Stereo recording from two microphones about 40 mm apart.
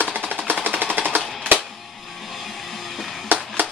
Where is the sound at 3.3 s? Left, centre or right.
Right.